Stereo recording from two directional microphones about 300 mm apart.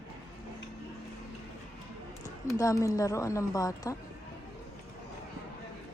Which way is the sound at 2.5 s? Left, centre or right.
Centre.